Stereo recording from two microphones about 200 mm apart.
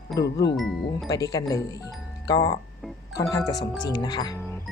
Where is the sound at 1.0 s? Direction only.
20° left (ahead or behind).